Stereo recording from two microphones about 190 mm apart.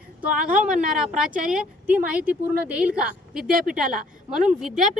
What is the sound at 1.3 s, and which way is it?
Speech, 45° right (ahead or behind).